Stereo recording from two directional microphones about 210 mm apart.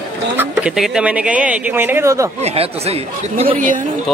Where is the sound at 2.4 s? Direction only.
30° right (ahead or behind).